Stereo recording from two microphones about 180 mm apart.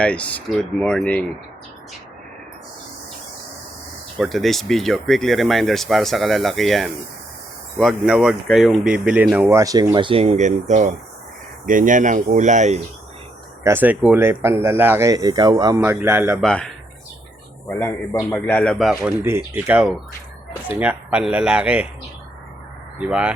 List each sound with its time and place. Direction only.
0.0 s speech: 5° left (ahead or behind)
4.2 s speech: centre (ahead or behind); by 12.8 s 40° right (ahead or behind)
13.7 s speech: 10° right (ahead or behind)
16.4 s speech: 5° left (ahead or behind)
23.0 s speech: 5° right (ahead or behind)